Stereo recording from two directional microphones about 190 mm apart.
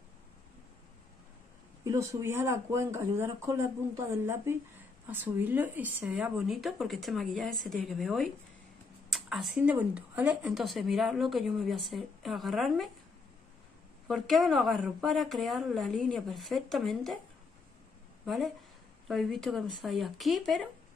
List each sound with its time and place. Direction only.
1.9 s a woman's voice: 15° right (ahead or behind); by 12.9 s centre (ahead or behind)
14.0 s a woman's voice: centre (ahead or behind)
18.2 s a woman's voice: centre (ahead or behind)